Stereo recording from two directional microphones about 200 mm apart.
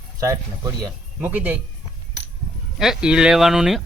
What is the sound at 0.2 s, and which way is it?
A man's voice, 15° right (ahead or behind).